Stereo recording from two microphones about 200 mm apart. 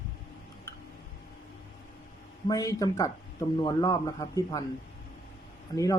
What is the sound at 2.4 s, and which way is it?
Speech, 20° left (ahead or behind).